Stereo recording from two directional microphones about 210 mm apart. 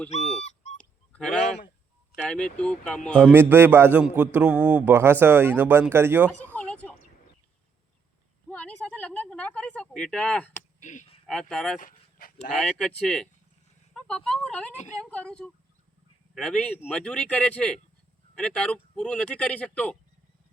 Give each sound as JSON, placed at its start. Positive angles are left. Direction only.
{"t": 0.4, "sound": "goose", "side_deg": 30}
{"t": 0.8, "sound": "honk", "side_deg": 5}
{"t": 2.1, "sound": "speech", "side_deg": 5}
{"t": 3.3, "sound": "speech", "side_deg": -10}
{"t": 6.4, "sound": "a sound", "side_deg": 10}
{"t": 8.4, "sound": "a sound", "side_deg": 5}
{"t": 10.8, "sound": "a sound", "side_deg": 35}
{"t": 11.3, "sound": "speech", "side_deg": 5}
{"t": 11.8, "sound": "dog", "side_deg": 40}
{"t": 12.5, "sound": "speech", "side_deg": 5}
{"t": 14.3, "sound": "speech", "side_deg": 5}